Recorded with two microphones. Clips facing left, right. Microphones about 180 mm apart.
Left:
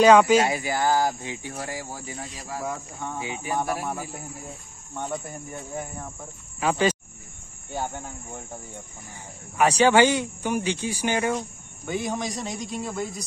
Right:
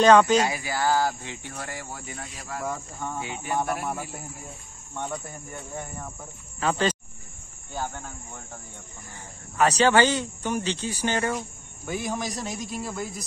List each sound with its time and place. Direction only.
0.0 s speech: 10° left (ahead or behind)
0.5 s speech: 20° left (ahead or behind)
2.7 s speech: centre (ahead or behind)
5.5 s speech: 5° left (ahead or behind); by 8.5 s 20° left (ahead or behind)
9.6 s speech: 10° left (ahead or behind)
11.3 s speech: centre (ahead or behind)